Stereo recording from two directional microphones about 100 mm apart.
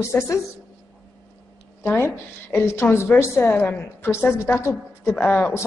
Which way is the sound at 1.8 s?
25° left (ahead or behind).